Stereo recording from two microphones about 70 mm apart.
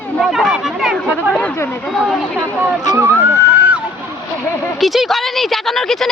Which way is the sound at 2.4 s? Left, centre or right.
Right.